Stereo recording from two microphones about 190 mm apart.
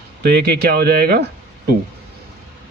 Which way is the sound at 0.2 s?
55° right (ahead or behind).